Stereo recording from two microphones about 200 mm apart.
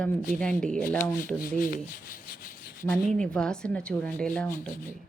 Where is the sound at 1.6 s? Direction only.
45° left (ahead or behind).